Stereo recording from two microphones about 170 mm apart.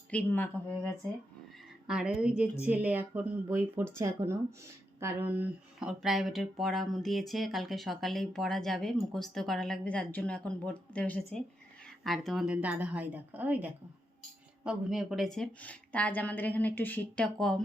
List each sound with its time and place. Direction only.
0.1 s a woman's voice: 10° left (ahead or behind)
1.9 s a woman's voice: 5° right (ahead or behind)